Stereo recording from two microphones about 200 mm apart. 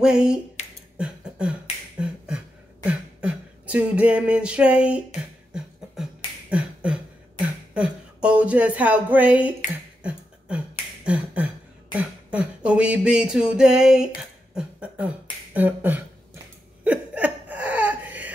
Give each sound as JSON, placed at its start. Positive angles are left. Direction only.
{"t": 0.0, "sound": "speech", "side_deg": -5}
{"t": 0.9, "sound": "beatboxing", "side_deg": -5}
{"t": 6.5, "sound": "beatboxing", "side_deg": -5}
{"t": 11.1, "sound": "beatboxing", "side_deg": -5}
{"t": 16.8, "sound": "laughter", "side_deg": -5}